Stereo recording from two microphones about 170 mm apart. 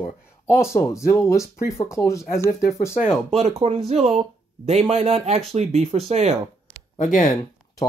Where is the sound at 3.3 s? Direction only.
40° right (ahead or behind).